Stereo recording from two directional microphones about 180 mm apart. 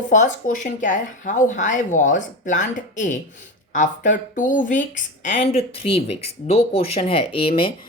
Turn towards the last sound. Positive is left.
turn(degrees=30)  # may be behind; listen again after turning